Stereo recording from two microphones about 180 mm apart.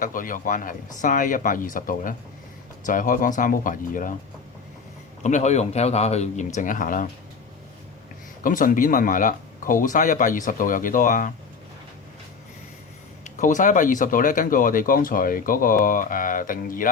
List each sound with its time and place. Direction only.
0.0 s speech: 50° left (ahead or behind)
5.2 s speech: 40° left (ahead or behind)
8.4 s speech: 50° left (ahead or behind)
13.2 s speech: 45° left (ahead or behind)